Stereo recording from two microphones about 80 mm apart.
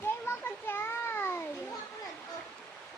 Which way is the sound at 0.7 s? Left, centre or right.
Left.